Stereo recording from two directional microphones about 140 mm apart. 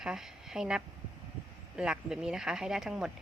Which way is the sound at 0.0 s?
5° right (ahead or behind).